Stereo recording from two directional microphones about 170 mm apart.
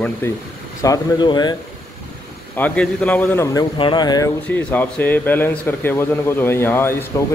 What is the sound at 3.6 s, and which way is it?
Speech, 25° left (ahead or behind).